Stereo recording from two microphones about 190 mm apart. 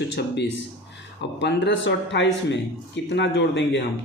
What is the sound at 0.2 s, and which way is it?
Speech, 65° left (ahead or behind).